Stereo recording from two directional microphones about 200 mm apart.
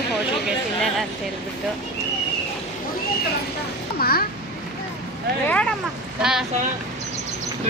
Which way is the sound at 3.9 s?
50° left (ahead or behind).